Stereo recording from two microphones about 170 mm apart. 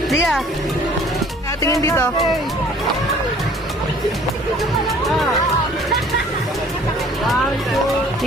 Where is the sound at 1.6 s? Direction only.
20° left (ahead or behind).